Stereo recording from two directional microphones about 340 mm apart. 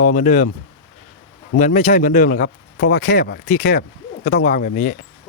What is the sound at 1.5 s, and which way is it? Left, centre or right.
Speech, left.